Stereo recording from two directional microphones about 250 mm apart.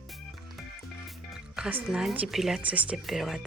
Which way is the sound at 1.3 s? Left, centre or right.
Centre.